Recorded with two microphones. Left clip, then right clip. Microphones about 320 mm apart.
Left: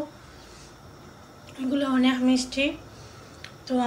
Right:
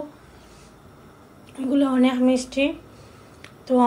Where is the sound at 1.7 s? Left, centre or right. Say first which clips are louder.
Right 4 dB; centre.